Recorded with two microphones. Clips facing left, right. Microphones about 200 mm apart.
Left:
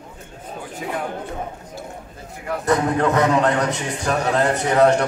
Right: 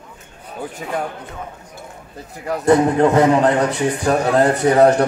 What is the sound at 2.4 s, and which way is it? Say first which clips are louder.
A man's voice: right 6 dB; 35° right (ahead or behind).